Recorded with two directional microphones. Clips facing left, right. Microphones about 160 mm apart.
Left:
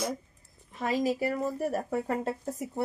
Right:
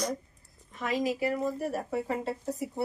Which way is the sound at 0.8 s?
35° left (ahead or behind).